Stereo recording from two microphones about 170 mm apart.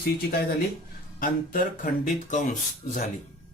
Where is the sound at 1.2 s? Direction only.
55° left (ahead or behind).